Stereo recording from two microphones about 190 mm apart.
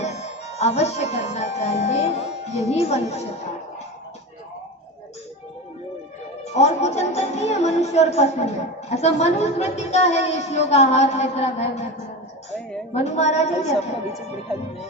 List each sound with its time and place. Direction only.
0.0 s speech: 35° left (ahead or behind)
6.4 s a woman's voice: 35° left (ahead or behind)
12.9 s a woman's voice: 35° left (ahead or behind)